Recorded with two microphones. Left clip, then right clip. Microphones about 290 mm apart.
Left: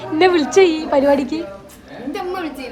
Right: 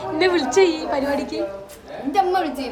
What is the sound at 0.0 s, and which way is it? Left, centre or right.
A woman's voice, centre.